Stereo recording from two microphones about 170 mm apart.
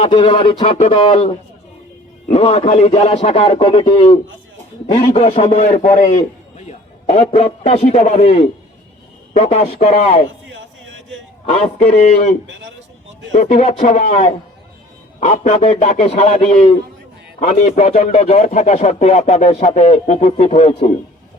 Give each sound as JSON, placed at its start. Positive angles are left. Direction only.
{"t": 0.0, "sound": "a man's voice", "side_deg": 30}
{"t": 5.5, "sound": "a man's voice", "side_deg": 45}
{"t": 6.7, "sound": "a man's voice", "side_deg": 40}
{"t": 11.4, "sound": "a man's voice", "side_deg": 35}